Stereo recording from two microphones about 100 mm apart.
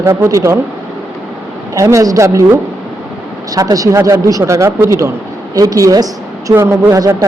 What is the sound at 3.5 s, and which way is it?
A woman's voice, 35° right (ahead or behind).